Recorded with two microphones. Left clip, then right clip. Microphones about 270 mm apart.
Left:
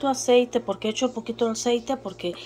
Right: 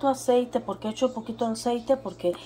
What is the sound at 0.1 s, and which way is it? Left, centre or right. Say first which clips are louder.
Speech: left 7 dB; centre.